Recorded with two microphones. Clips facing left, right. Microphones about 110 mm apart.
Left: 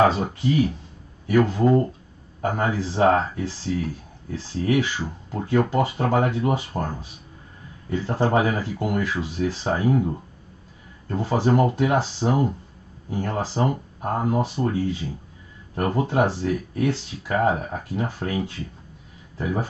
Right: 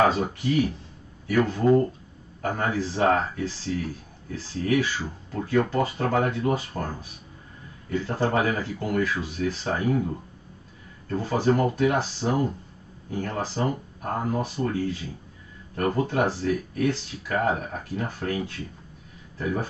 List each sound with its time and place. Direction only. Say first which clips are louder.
0.0 s speech: left 2 dB; 25° left (ahead or behind)
11.1 s speech: left 2 dB; 20° left (ahead or behind)
15.7 s speech: left 2 dB; 20° left (ahead or behind)
19.4 s speech: left 2 dB; 20° left (ahead or behind)